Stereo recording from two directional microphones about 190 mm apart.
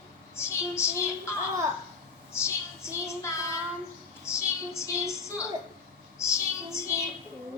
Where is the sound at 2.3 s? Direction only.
15° left (ahead or behind).